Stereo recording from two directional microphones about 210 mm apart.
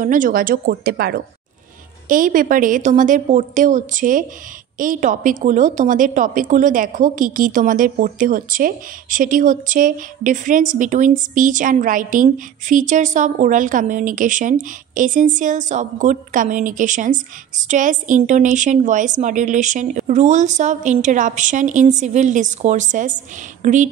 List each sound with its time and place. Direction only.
0.0 s a woman's voice: 40° right (ahead or behind)